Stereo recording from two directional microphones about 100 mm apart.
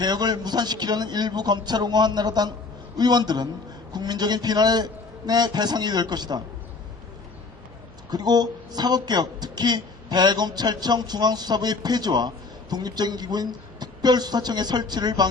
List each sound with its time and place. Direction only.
0.0 s speech: 45° right (ahead or behind)
8.1 s speech: 45° right (ahead or behind)